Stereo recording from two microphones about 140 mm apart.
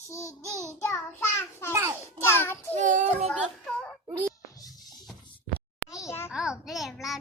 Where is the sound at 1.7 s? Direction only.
20° right (ahead or behind).